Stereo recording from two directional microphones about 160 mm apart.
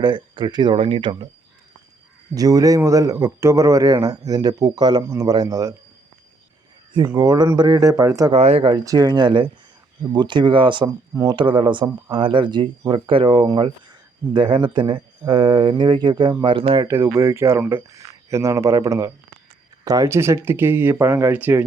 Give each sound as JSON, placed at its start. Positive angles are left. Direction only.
{"t": 0.0, "sound": "speech", "side_deg": -30}
{"t": 2.3, "sound": "speech", "side_deg": -25}
{"t": 7.1, "sound": "speech", "side_deg": -20}
{"t": 8.3, "sound": "speech", "side_deg": -40}
{"t": 8.8, "sound": "speech", "side_deg": -20}
{"t": 16.8, "sound": "speech", "side_deg": -15}